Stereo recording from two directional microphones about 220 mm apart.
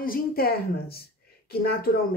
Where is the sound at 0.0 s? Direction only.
40° left (ahead or behind).